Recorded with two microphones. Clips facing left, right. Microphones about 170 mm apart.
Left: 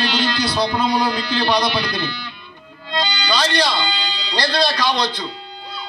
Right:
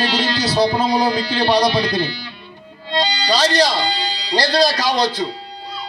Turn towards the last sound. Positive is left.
turn(degrees=-40)  # may be behind; listen again after turning